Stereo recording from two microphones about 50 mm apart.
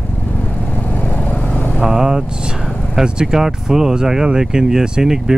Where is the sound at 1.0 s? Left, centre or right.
Left.